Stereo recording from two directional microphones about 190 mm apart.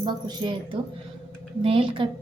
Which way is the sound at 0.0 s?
25° right (ahead or behind).